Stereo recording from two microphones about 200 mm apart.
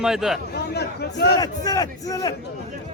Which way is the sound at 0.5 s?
55° left (ahead or behind).